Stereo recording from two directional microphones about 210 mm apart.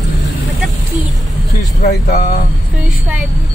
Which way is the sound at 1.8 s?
55° left (ahead or behind).